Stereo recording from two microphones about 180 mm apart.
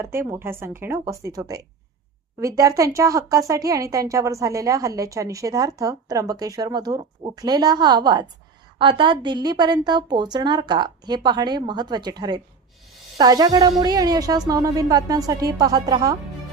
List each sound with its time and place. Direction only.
0.0 s a woman's voice: 15° right (ahead or behind)